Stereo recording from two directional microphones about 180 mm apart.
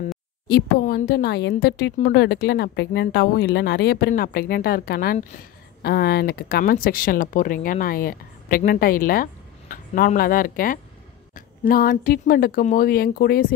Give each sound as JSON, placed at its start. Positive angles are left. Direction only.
{"t": 0.5, "sound": "speech", "side_deg": 60}
{"t": 2.0, "sound": "speech", "side_deg": 55}